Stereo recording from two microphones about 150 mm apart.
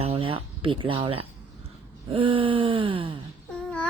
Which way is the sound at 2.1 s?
35° right (ahead or behind).